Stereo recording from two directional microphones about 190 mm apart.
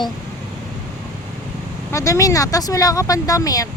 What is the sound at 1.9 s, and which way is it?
Speech, 15° left (ahead or behind).